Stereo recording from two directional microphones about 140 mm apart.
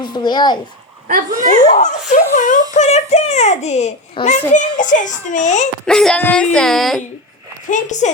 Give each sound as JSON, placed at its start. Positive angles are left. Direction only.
{"t": 0.0, "sound": "a child's voice", "side_deg": 30}
{"t": 1.0, "sound": "speech", "side_deg": -70}
{"t": 1.7, "sound": "a child's voice", "side_deg": 55}
{"t": 2.7, "sound": "a child's voice", "side_deg": 50}
{"t": 5.8, "sound": "speech", "side_deg": 5}
{"t": 7.7, "sound": "a child's voice", "side_deg": 60}